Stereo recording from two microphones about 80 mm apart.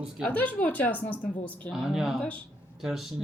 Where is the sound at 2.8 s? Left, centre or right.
Centre.